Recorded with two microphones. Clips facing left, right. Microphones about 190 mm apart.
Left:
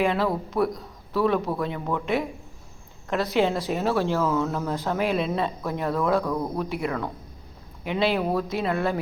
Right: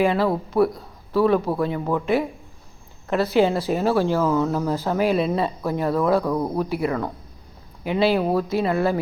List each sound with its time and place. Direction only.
0.0 s a man's voice: centre (ahead or behind)